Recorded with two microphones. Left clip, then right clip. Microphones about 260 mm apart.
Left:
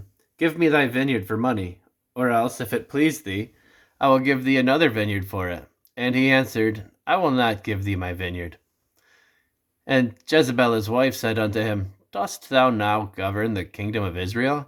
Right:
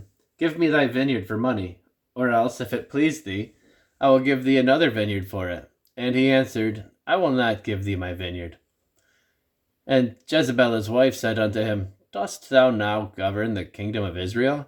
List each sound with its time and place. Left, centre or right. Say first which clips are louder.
0.3 s speech: left 1 dB; centre
9.8 s speech: even; centre